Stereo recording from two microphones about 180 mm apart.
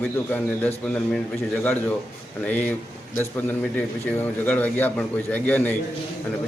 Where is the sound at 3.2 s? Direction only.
10° left (ahead or behind).